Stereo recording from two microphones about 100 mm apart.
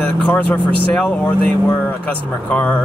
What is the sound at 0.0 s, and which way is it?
Speech, 10° left (ahead or behind).